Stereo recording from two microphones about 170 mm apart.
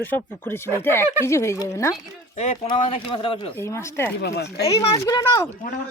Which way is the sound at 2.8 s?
35° left (ahead or behind).